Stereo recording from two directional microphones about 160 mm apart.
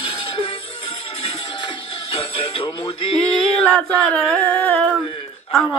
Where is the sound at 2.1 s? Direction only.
35° left (ahead or behind).